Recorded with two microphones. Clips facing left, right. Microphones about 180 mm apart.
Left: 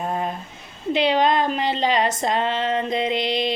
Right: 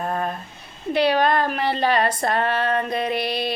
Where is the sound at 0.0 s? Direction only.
15° left (ahead or behind).